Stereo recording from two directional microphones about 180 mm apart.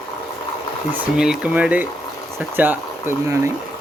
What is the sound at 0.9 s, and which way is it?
Speech, 5° right (ahead or behind).